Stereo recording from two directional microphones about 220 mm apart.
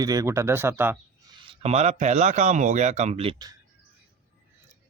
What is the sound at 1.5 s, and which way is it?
A man's voice, 30° right (ahead or behind).